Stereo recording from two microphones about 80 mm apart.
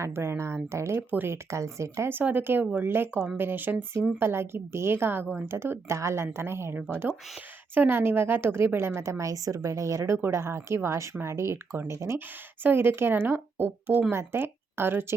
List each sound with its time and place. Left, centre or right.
0.0 s a woman's voice: right
1.5 s a woman's voice: right